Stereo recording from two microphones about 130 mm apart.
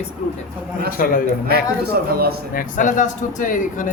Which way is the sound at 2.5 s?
90° left.